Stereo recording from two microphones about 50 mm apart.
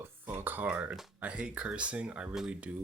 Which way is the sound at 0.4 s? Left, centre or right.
Right.